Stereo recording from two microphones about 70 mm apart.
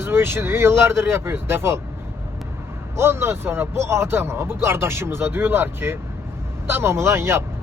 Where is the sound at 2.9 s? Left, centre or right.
Right.